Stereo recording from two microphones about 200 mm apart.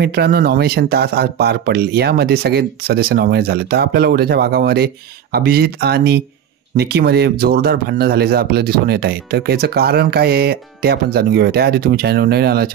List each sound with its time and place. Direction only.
0.0 s speech: 55° right (ahead or behind)